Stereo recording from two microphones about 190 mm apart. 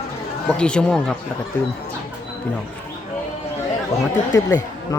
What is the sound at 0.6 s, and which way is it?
Speech, 5° left (ahead or behind).